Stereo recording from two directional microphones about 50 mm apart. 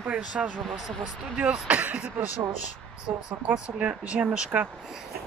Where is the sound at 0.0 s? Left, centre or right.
Right.